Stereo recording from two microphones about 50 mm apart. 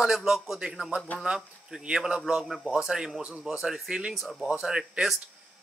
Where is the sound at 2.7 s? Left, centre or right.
Centre.